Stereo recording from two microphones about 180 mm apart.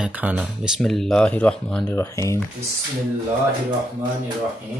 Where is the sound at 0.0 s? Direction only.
10° right (ahead or behind).